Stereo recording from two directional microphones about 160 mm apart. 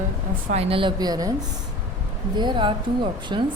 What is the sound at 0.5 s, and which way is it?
Speech, 35° right (ahead or behind).